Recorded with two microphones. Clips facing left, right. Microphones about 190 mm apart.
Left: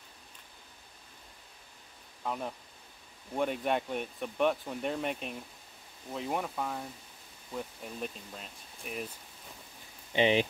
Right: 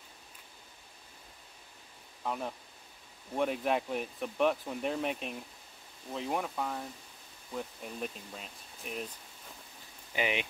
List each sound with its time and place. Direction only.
2.2 s speech: centre (ahead or behind)
10.1 s speech: 30° left (ahead or behind)